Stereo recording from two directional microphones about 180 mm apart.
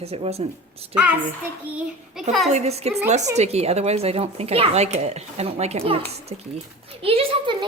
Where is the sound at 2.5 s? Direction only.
35° right (ahead or behind).